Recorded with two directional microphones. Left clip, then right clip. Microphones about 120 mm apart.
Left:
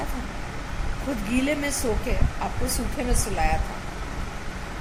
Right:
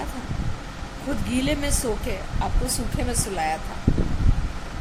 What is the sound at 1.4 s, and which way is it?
Speech, 20° right (ahead or behind).